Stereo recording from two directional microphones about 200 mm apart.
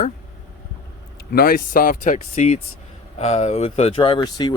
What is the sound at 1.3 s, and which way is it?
Speech, 45° left (ahead or behind).